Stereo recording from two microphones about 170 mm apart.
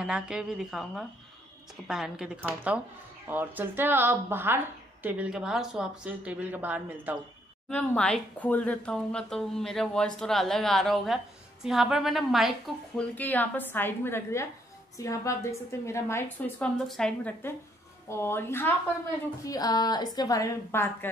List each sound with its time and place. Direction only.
0.0 s a woman's voice: 5° right (ahead or behind)
7.7 s a woman's voice: 5° left (ahead or behind)